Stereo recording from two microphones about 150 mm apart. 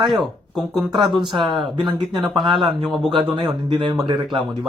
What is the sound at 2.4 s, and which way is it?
Speech, 30° right (ahead or behind).